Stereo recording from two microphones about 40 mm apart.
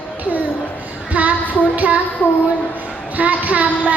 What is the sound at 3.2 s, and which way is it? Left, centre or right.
Child singing, right.